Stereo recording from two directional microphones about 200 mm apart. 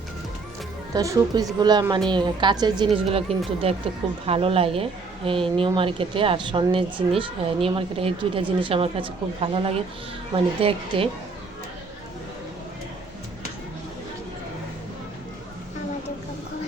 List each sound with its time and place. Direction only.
0.9 s a woman's voice: 15° right (ahead or behind)